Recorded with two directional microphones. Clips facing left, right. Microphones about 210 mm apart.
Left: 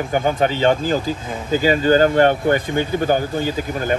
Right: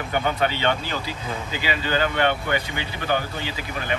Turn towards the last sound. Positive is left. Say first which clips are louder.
# left 9 dB
turn(degrees=45)  # may be behind; listen again after turning